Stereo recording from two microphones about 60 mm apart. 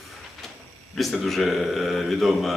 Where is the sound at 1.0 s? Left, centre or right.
Centre.